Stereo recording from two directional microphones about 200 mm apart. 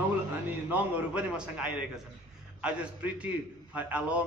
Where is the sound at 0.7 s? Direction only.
5° right (ahead or behind).